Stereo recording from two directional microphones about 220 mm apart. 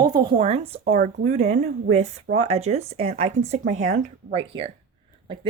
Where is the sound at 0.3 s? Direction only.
25° right (ahead or behind).